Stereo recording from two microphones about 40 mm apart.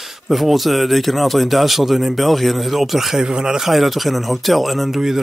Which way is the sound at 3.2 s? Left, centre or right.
Centre.